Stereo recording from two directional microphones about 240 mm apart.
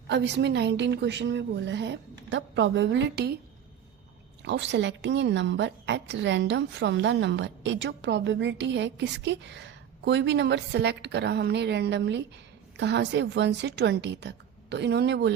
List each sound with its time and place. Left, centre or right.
0.1 s a woman's voice: right
4.4 s a woman's voice: right